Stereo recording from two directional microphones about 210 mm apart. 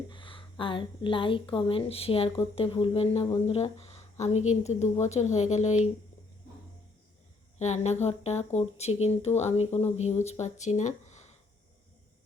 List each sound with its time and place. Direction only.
0.1 s a woman's voice: 25° left (ahead or behind)
7.6 s speech: 30° left (ahead or behind)